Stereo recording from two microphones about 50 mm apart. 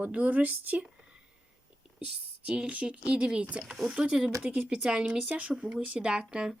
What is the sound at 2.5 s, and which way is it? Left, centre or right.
Speech, right.